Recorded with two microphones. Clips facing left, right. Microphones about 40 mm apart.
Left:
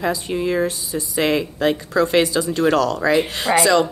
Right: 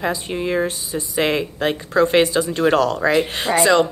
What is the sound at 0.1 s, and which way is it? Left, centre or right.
Speech, right.